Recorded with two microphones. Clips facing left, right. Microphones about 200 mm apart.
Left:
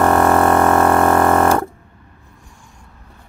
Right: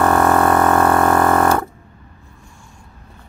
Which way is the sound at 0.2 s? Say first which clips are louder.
Left 1 dB; 25° left (ahead or behind).